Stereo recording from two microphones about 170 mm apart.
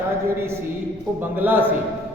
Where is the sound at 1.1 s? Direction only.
10° right (ahead or behind).